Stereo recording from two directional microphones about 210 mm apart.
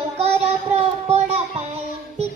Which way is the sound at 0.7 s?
30° right (ahead or behind).